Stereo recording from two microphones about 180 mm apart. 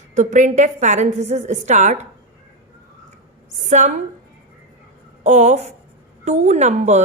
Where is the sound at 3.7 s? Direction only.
40° right (ahead or behind).